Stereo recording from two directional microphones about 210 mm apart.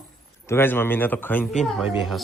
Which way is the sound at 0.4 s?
10° left (ahead or behind).